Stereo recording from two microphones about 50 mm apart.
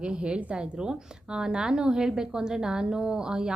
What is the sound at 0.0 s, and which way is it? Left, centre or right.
A woman's voice, right.